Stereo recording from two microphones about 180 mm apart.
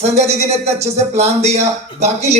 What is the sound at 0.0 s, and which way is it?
Speech, 35° right (ahead or behind).